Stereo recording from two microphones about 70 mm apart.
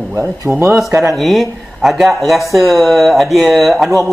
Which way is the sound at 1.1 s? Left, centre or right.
Centre.